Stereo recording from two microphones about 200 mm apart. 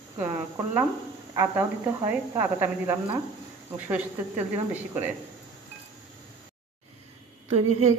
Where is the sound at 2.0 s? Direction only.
10° right (ahead or behind).